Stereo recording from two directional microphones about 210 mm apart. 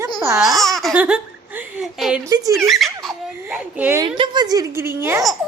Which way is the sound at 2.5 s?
Centre (ahead or behind).